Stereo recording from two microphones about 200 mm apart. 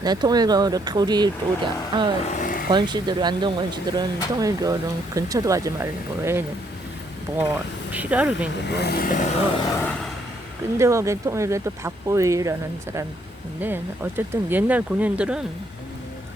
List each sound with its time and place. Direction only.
0.0 s speech: 20° right (ahead or behind)
2.2 s vehicle: 40° left (ahead or behind)
2.7 s speech: 20° right (ahead or behind)
7.9 s speech: 5° right (ahead or behind)
8.7 s speech: 55° left (ahead or behind); by 9.4 s 40° left (ahead or behind)
9.6 s vehicle: 15° left (ahead or behind)
10.8 s speech: 15° right (ahead or behind)
13.6 s speech: 10° right (ahead or behind)